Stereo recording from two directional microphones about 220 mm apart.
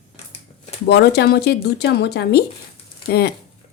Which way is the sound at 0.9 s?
50° left (ahead or behind).